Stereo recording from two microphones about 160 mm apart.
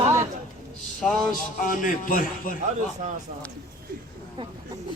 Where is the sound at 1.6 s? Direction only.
60° left (ahead or behind).